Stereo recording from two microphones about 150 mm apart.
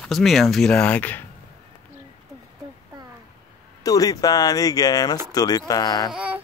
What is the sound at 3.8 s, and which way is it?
Speech, 25° left (ahead or behind).